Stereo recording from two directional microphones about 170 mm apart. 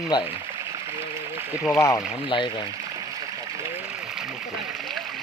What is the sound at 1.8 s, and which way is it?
Speech, 20° left (ahead or behind).